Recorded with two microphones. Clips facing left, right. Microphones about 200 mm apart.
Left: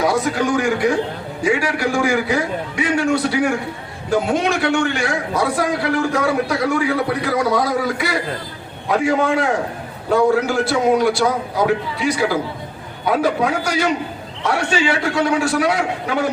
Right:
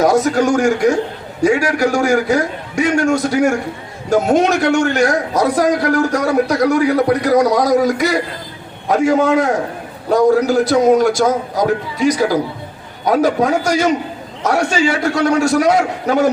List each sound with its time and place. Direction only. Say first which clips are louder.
0.0 s a man's voice: right 5 dB; 45° right (ahead or behind)